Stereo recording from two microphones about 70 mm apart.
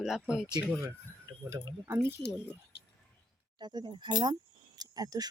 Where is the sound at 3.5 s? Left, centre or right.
Right.